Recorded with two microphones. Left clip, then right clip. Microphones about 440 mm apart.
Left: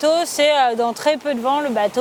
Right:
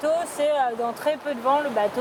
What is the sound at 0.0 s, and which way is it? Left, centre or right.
Speech, left.